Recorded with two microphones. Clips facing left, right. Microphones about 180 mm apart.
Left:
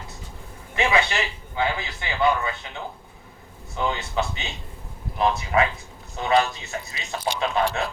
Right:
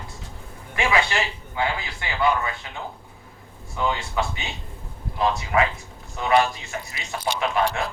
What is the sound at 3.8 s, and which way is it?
Speech, 25° left (ahead or behind).